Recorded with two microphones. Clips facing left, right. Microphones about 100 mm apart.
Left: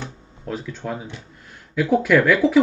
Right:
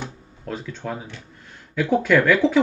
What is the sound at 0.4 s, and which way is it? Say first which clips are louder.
Speech: left 1 dB; 5° left (ahead or behind).